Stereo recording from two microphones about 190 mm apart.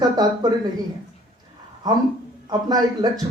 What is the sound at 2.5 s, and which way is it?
Speech, 20° right (ahead or behind).